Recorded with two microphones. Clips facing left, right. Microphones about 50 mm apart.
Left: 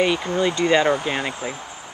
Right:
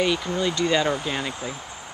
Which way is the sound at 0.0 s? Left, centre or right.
Left.